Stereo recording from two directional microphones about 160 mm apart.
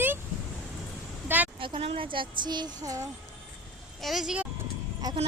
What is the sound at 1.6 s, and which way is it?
Speech, 35° right (ahead or behind).